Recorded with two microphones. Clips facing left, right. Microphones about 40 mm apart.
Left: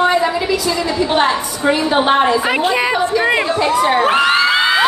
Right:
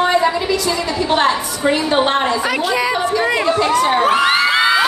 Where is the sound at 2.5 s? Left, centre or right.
Left.